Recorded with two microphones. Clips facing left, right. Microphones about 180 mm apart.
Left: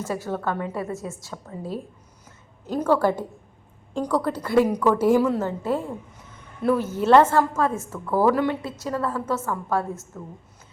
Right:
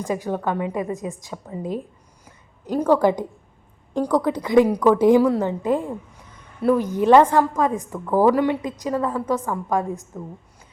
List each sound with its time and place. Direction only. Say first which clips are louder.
0.0 s a woman's voice: right 3 dB; 15° right (ahead or behind)
2.2 s a sound: right 3 dB; 10° right (ahead or behind)
3.9 s a woman's voice: right 4 dB; 15° right (ahead or behind)